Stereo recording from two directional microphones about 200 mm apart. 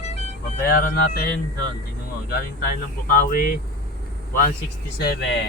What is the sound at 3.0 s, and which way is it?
Speech, 45° left (ahead or behind).